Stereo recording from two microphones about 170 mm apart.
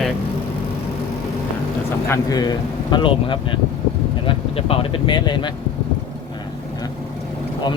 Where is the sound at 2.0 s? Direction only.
20° left (ahead or behind).